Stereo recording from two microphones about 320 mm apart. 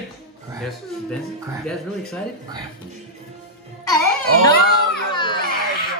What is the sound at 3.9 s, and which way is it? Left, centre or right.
Music, centre.